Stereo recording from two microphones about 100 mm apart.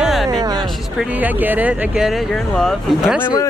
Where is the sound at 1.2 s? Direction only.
15° right (ahead or behind); by 3.0 s 5° left (ahead or behind).